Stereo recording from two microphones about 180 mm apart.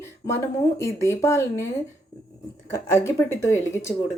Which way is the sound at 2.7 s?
15° left (ahead or behind).